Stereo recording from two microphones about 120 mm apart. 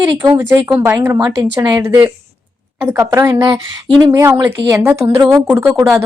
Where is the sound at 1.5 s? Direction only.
40° right (ahead or behind).